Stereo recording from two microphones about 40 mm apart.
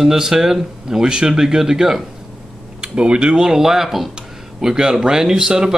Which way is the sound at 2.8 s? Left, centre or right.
Right.